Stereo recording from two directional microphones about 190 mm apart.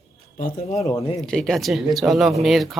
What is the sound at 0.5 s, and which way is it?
Speech, 35° left (ahead or behind).